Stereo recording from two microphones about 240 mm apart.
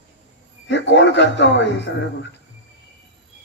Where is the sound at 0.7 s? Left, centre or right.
Left.